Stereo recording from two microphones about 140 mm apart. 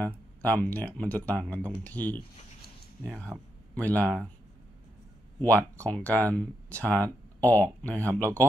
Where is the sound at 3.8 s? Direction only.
10° left (ahead or behind).